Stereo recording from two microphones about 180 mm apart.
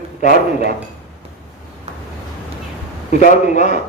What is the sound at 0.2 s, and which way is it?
Speech, 45° left (ahead or behind).